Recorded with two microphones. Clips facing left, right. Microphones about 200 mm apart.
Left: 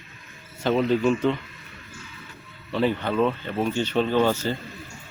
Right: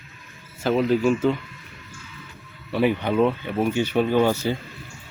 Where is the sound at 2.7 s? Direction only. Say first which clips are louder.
Right 2 dB; 15° right (ahead or behind).